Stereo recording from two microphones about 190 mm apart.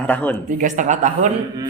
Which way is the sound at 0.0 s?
10° left (ahead or behind).